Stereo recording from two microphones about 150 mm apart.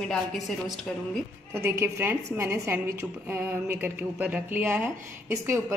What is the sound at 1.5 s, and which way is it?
A woman's voice, 15° right (ahead or behind).